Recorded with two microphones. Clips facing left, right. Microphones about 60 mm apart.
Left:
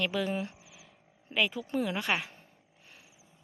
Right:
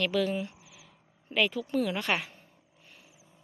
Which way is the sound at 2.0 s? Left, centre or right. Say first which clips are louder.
Right 1 dB; centre.